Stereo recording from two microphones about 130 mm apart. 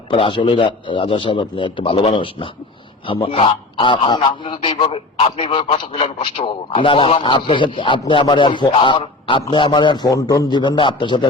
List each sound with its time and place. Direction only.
0.1 s a man's voice: 40° left (ahead or behind)